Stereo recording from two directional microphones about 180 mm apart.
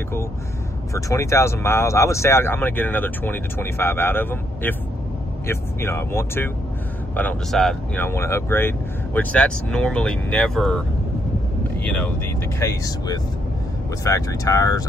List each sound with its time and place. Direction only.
0.9 s speech: 15° left (ahead or behind)
12.5 s speech: 20° left (ahead or behind)